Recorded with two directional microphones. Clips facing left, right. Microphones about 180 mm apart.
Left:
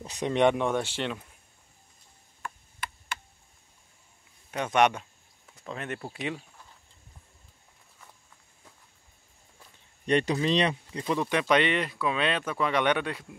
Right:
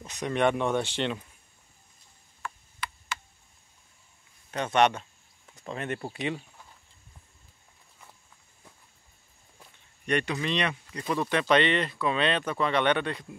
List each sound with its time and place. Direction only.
0.0 s speech: 30° left (ahead or behind); by 1.1 s 5° left (ahead or behind)
2.8 s tick: 50° left (ahead or behind)
4.5 s speech: 10° left (ahead or behind)
10.0 s speech: 30° left (ahead or behind)
11.1 s speech: 15° left (ahead or behind)